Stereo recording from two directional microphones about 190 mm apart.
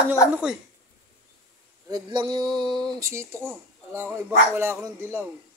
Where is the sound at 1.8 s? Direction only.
20° right (ahead or behind).